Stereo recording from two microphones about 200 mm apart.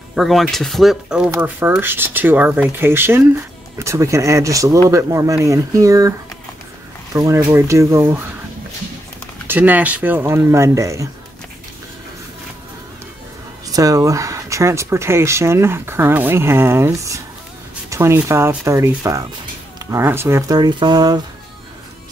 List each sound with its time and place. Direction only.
0.1 s speech: centre (ahead or behind)
9.5 s speech: 10° right (ahead or behind)
13.7 s speech: 15° right (ahead or behind)